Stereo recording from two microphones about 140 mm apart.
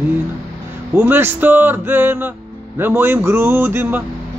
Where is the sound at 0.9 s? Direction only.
15° right (ahead or behind).